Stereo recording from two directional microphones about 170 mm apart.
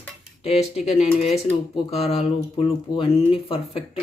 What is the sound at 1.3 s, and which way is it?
Speech, 35° left (ahead or behind).